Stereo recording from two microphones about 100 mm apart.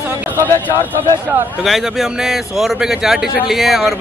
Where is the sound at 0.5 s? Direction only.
20° left (ahead or behind).